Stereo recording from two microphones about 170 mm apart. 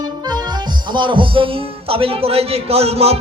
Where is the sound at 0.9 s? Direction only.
30° right (ahead or behind).